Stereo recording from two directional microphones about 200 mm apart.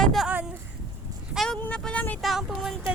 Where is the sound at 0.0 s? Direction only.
Centre (ahead or behind).